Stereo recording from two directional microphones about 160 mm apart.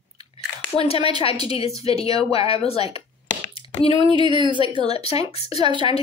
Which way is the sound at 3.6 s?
35° left (ahead or behind).